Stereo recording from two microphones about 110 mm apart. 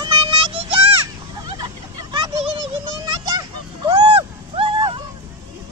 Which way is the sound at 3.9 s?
55° right (ahead or behind).